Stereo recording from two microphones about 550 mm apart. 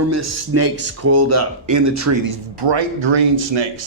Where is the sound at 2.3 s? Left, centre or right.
Right.